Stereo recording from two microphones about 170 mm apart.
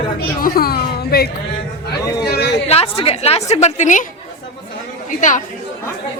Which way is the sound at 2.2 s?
70° left (ahead or behind).